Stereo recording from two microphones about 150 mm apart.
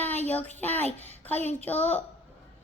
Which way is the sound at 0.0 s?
10° left (ahead or behind).